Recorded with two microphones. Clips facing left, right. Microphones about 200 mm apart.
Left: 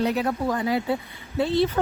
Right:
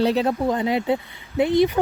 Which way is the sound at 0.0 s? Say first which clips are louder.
Right 4 dB; 30° right (ahead or behind).